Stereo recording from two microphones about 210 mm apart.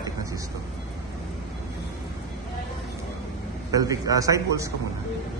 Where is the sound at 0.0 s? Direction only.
15° right (ahead or behind).